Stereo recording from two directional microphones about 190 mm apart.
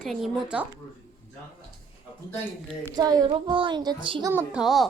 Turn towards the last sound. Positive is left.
turn(degrees=0)  # may be behind; listen again after turning